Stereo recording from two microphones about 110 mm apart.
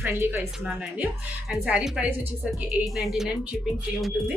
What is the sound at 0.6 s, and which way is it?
Speech, 10° right (ahead or behind).